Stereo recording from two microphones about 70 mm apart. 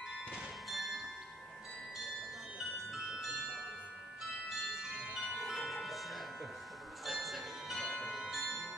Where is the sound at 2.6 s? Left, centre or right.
Centre.